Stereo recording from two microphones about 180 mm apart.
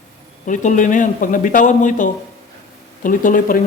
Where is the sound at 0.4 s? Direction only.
45° left (ahead or behind).